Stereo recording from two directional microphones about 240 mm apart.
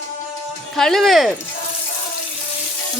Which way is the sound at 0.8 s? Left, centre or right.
Centre.